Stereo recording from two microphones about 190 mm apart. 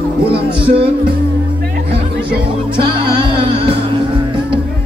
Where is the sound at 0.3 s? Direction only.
30° right (ahead or behind).